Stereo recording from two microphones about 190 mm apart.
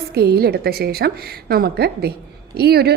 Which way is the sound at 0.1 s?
55° right (ahead or behind).